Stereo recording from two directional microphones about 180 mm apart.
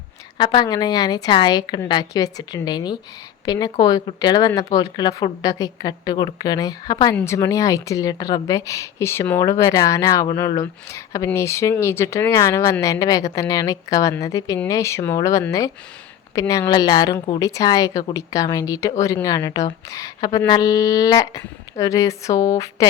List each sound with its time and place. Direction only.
0.3 s a woman's voice: 25° left (ahead or behind)